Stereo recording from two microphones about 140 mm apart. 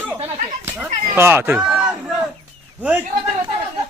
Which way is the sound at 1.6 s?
5° right (ahead or behind).